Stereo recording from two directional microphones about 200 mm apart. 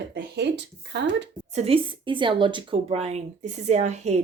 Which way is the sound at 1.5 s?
30° right (ahead or behind).